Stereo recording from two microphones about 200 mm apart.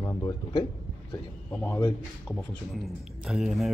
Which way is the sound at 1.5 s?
10° left (ahead or behind).